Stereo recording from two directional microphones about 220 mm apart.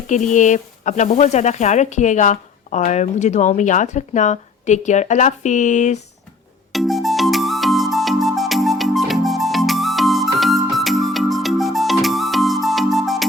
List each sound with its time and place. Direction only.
0.1 s speech: 35° left (ahead or behind)
6.7 s music: centre (ahead or behind)